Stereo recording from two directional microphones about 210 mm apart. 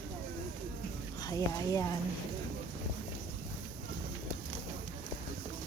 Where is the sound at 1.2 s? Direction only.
15° left (ahead or behind).